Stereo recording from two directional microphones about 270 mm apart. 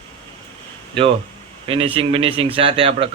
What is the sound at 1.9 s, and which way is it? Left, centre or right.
A man's voice, centre.